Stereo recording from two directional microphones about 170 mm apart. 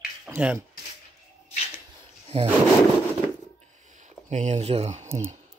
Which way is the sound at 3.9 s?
45° right (ahead or behind).